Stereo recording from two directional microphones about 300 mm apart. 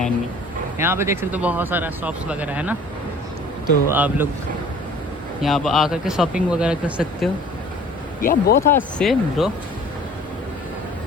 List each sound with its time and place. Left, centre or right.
0.8 s speech: centre
3.8 s speech: centre
5.4 s speech: centre
8.2 s speech: left
8.6 s speech: centre